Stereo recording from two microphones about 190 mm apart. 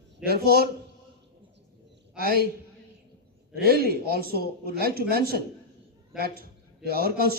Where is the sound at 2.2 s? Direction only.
50° left (ahead or behind).